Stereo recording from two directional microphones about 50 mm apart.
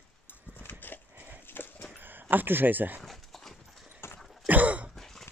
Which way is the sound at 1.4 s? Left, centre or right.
Left.